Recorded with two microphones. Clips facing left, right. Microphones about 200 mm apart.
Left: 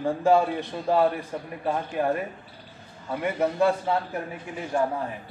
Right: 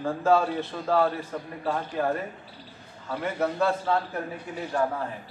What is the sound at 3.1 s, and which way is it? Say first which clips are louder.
Speech: left 2 dB; 15° left (ahead or behind).